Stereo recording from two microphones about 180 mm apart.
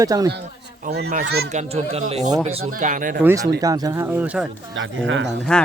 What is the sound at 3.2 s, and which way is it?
Speech, 20° right (ahead or behind).